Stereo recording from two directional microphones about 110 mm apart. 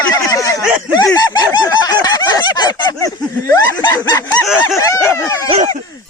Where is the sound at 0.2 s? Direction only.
30° left (ahead or behind).